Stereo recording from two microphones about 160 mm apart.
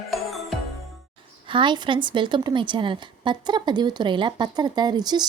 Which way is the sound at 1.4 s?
30° right (ahead or behind).